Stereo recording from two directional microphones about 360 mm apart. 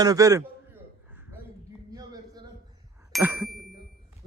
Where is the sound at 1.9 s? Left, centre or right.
Centre.